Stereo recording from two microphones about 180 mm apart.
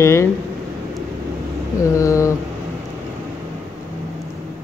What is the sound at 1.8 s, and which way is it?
Speech, 15° left (ahead or behind).